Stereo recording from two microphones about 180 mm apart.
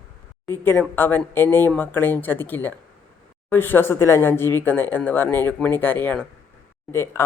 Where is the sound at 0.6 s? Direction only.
10° left (ahead or behind).